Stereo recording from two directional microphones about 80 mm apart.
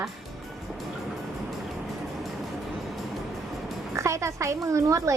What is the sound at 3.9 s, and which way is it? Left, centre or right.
Speech, right.